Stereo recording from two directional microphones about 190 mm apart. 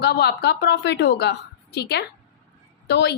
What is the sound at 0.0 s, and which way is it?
A woman's voice, 60° left (ahead or behind).